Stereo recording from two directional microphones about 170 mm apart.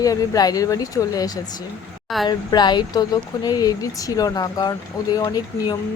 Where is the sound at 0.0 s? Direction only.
20° left (ahead or behind).